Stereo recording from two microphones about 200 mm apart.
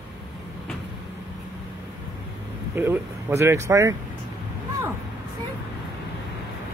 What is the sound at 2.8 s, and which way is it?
Speech, 10° right (ahead or behind).